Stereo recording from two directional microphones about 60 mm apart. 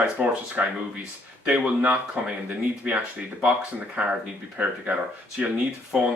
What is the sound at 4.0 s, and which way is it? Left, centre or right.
Speech, right.